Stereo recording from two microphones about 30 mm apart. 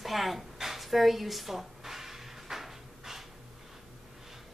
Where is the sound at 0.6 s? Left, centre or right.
Centre.